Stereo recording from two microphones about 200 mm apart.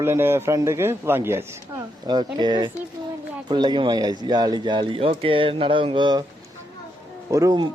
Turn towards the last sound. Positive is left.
turn(degrees=-20)  # may be behind; listen again after turning